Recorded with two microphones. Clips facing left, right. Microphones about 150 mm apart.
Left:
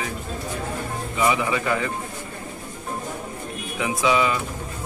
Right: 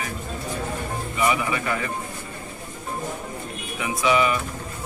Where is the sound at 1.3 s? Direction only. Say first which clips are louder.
Left 2 dB; 15° left (ahead or behind).